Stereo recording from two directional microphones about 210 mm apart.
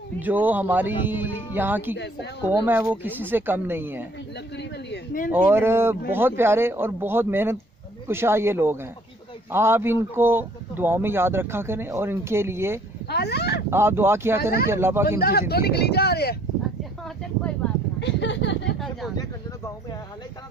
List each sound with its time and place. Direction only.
0.2 s speech: 10° right (ahead or behind)
4.5 s speech: 45° left (ahead or behind)
5.3 s speech: 10° right (ahead or behind)
13.1 s speech: 50° left (ahead or behind)
13.7 s speech: 10° right (ahead or behind)
15.2 s speech: 50° left (ahead or behind)
18.0 s speech: 55° left (ahead or behind)